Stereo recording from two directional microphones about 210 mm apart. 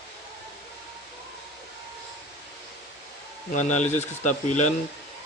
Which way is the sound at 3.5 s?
35° left (ahead or behind).